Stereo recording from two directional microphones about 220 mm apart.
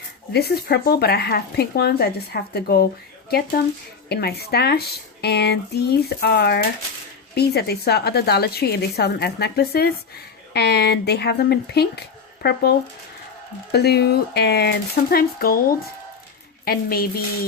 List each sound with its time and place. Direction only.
0.3 s speech: 45° left (ahead or behind)
13.7 s speech: 45° left (ahead or behind)
16.6 s speech: 45° left (ahead or behind)